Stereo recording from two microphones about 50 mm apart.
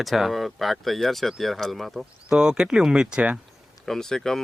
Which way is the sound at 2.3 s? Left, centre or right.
Centre.